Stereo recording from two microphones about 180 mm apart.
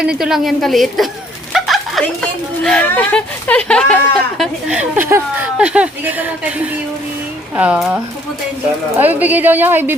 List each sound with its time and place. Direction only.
0.2 s a woman's voice: centre (ahead or behind)
4.7 s speech: 10° right (ahead or behind)
7.5 s speech: 5° right (ahead or behind)
9.0 s speech: 10° right (ahead or behind)